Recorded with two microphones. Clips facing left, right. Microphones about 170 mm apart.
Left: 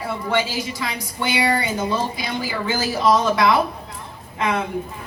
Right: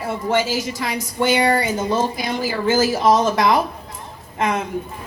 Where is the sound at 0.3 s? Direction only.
45° right (ahead or behind).